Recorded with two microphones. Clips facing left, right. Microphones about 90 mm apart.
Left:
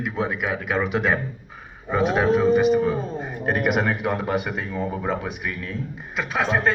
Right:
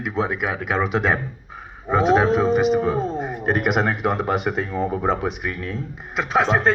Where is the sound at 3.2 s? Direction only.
25° right (ahead or behind).